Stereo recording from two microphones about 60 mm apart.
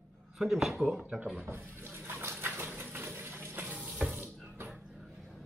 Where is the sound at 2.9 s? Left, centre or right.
Right.